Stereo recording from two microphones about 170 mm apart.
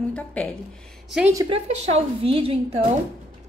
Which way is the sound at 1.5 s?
35° right (ahead or behind).